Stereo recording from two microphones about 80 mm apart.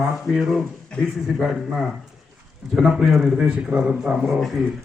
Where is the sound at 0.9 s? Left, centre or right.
Centre.